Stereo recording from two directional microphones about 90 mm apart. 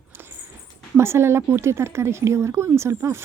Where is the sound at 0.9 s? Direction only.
30° right (ahead or behind).